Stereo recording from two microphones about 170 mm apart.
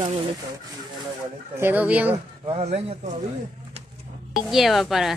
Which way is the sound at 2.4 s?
40° right (ahead or behind).